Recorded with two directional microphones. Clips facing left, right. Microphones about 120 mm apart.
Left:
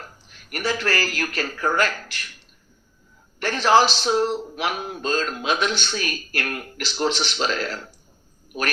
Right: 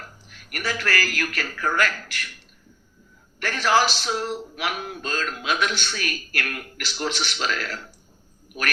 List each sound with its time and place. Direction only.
0.3 s a man's voice: 25° left (ahead or behind)
3.4 s a man's voice: 25° left (ahead or behind)